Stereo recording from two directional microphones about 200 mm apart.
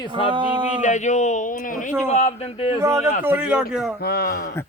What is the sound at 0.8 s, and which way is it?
A man's voice, 35° left (ahead or behind).